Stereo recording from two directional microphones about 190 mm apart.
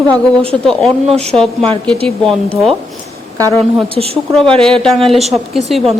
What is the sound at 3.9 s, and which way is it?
Speech, 30° right (ahead or behind).